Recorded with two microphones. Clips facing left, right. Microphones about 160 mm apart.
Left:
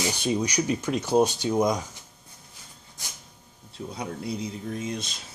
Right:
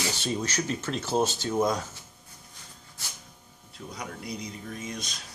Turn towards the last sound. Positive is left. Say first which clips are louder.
# left 5 dB
turn(degrees=25)  # may be behind; listen again after turning